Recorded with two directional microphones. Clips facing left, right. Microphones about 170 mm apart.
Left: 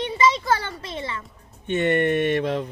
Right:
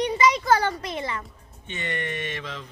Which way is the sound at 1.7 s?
55° left (ahead or behind).